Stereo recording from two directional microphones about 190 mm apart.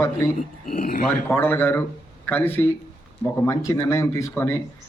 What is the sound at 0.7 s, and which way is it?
Speech, 45° left (ahead or behind).